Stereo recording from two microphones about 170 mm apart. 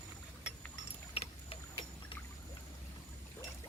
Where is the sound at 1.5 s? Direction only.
35° left (ahead or behind).